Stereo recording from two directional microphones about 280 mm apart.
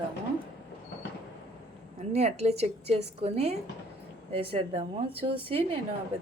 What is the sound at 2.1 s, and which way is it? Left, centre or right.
A woman's voice, right.